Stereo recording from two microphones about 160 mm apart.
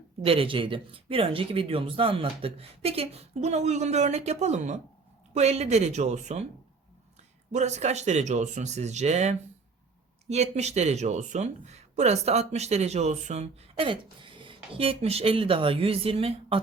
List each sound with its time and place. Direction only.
0.3 s speech: 35° right (ahead or behind)
7.5 s speech: 45° right (ahead or behind)